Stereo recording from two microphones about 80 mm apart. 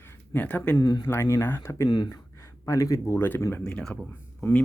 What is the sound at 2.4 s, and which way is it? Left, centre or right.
Speech, left.